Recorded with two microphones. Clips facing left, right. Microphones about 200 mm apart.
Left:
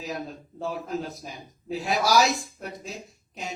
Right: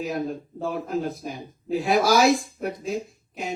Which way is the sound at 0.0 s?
55° right (ahead or behind).